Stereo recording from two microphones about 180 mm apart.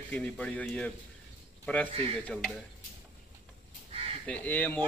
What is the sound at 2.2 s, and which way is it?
Speech, 5° left (ahead or behind).